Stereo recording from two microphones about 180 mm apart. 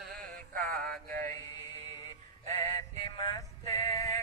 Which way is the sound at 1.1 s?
45° right (ahead or behind).